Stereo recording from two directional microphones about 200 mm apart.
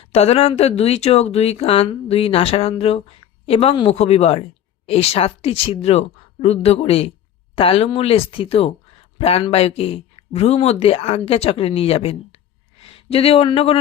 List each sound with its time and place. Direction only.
0.1 s speech: 30° left (ahead or behind)